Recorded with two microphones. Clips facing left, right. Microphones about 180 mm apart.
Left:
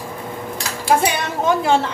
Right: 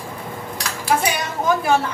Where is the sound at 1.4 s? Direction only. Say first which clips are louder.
Left 1 dB; 25° left (ahead or behind).